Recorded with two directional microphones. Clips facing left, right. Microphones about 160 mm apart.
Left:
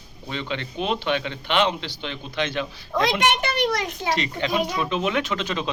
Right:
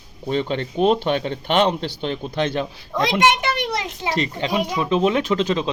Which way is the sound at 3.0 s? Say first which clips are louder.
Right 4 dB; 20° right (ahead or behind).